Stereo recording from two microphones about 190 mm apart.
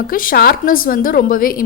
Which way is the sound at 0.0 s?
50° left (ahead or behind).